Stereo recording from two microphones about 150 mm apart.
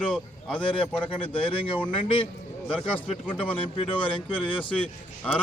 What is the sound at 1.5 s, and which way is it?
Speech, 35° left (ahead or behind).